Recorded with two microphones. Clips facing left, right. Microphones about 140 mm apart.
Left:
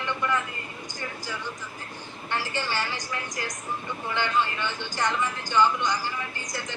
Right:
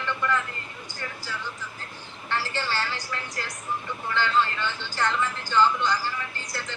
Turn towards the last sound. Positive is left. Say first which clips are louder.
# left 1 dB
turn(degrees=15)  # may be behind; listen again after turning